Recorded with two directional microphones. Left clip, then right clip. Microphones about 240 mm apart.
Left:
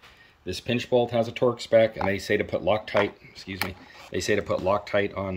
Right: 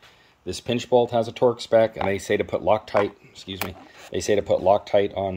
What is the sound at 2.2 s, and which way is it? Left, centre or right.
Speech, right.